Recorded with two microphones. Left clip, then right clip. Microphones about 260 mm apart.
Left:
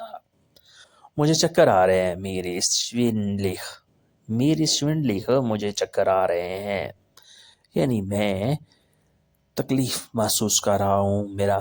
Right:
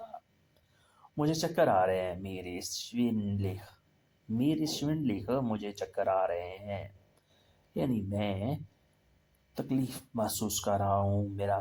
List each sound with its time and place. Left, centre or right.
1.1 s speech: left
9.6 s speech: left